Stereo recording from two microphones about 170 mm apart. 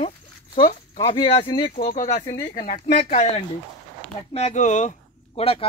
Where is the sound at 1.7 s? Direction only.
55° left (ahead or behind).